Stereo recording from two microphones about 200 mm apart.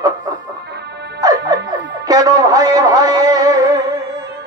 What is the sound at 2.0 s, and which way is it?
Music, 20° right (ahead or behind).